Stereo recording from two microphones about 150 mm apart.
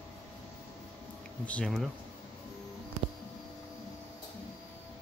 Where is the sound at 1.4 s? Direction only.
5° left (ahead or behind).